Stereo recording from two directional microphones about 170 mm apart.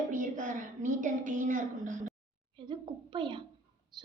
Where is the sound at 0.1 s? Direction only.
50° right (ahead or behind).